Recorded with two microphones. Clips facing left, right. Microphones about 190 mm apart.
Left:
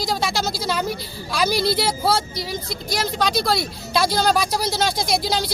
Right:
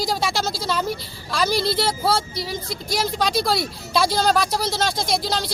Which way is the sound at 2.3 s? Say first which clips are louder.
Even; 30° right (ahead or behind).